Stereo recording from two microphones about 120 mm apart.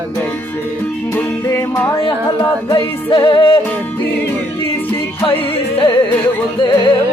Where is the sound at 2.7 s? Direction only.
40° left (ahead or behind).